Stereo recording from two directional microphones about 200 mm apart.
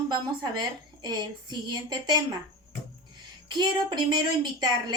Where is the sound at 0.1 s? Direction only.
20° right (ahead or behind).